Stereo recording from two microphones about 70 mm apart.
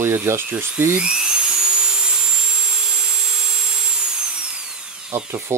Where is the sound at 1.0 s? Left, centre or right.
Centre.